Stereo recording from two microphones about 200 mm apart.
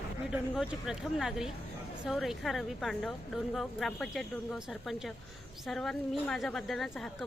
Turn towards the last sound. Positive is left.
turn(degrees=0)  # may be behind; listen again after turning